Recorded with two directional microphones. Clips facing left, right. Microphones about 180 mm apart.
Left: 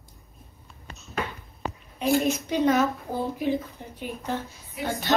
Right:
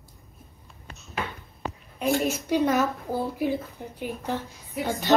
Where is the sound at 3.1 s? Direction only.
10° right (ahead or behind).